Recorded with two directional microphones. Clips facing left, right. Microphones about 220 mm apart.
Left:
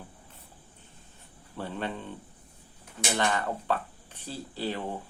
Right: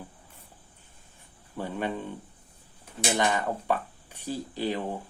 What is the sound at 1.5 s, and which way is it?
Speech, 10° right (ahead or behind).